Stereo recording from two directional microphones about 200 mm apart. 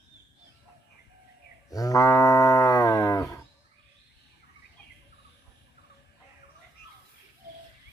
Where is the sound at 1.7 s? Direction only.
15° left (ahead or behind).